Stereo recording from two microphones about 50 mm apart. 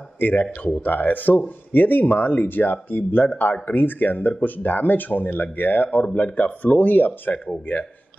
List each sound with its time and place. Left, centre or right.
0.2 s speech: left